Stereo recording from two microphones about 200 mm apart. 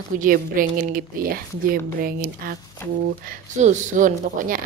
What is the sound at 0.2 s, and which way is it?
A woman's voice, 45° right (ahead or behind).